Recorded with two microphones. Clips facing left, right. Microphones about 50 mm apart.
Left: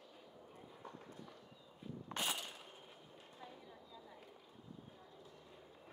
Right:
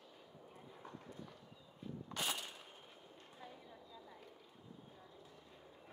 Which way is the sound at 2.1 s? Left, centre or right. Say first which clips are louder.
Left 1 dB; left.